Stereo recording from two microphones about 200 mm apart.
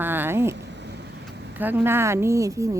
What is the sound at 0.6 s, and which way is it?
Vehicle, 60° right (ahead or behind).